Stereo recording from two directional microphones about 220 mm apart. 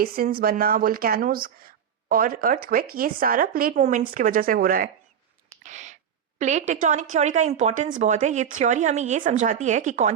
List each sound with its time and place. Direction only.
0.0 s speech: 40° right (ahead or behind)
5.6 s a sound: 30° right (ahead or behind)
6.4 s speech: 30° right (ahead or behind)